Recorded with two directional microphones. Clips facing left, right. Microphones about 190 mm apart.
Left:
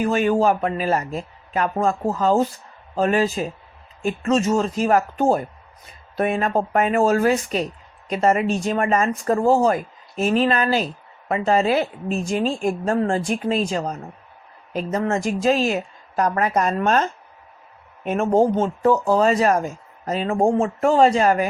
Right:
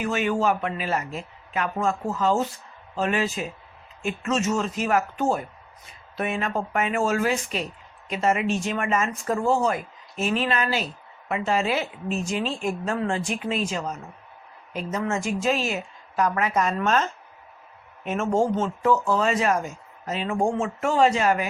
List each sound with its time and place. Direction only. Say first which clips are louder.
0.0 s speech: left 5 dB; 40° left (ahead or behind)
12.2 s speech: left 7 dB; 50° left (ahead or behind)
15.1 s speech: left 5 dB; 40° left (ahead or behind)